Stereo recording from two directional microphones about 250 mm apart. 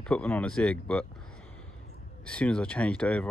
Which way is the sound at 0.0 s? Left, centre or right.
Centre.